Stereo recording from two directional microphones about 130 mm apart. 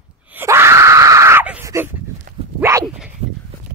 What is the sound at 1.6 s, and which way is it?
Dog, 20° right (ahead or behind).